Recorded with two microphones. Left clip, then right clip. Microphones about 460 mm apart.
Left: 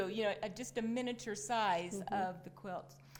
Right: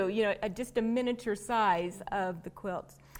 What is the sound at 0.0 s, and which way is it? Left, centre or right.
A woman's voice, right.